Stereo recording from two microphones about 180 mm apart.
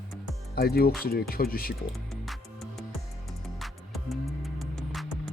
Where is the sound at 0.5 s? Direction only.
60° left (ahead or behind).